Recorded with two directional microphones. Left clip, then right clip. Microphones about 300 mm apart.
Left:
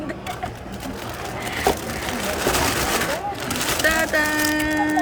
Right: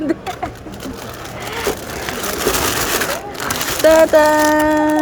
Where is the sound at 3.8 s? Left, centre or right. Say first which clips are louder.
Right 11 dB; centre.